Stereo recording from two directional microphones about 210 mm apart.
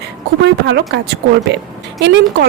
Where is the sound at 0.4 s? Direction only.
55° right (ahead or behind).